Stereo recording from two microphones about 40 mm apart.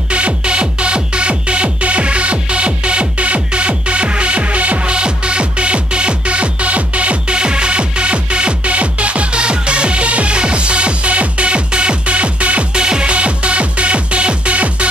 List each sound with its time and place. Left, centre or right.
0.1 s music: right